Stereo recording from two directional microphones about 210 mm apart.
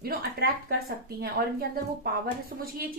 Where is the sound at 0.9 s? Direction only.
50° right (ahead or behind).